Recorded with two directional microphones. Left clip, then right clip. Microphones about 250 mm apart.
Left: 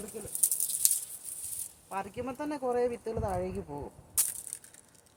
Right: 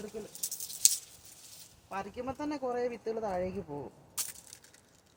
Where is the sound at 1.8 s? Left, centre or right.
Centre.